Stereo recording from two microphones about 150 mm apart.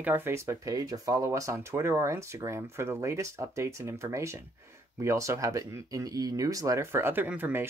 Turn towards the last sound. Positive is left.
turn(degrees=-15)  # may be behind; listen again after turning